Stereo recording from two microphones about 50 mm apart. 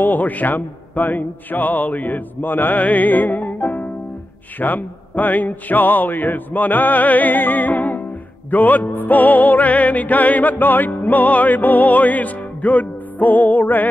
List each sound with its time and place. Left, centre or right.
0.0 s music: left